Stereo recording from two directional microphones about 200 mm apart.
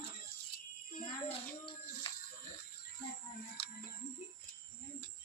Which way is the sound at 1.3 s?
25° left (ahead or behind).